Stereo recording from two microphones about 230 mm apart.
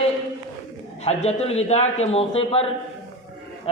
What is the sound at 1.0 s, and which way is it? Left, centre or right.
A man's voice, left.